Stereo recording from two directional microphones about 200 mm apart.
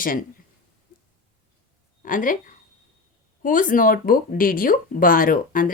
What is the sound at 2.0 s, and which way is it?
A woman's voice, 40° left (ahead or behind).